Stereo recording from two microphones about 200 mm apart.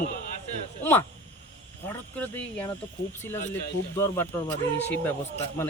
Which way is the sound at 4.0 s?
10° left (ahead or behind).